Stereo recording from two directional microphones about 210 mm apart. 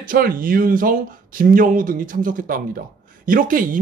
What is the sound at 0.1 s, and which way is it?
Speech, 40° right (ahead or behind).